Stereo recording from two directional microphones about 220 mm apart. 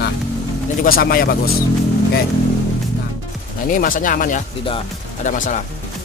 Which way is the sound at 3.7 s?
40° left (ahead or behind).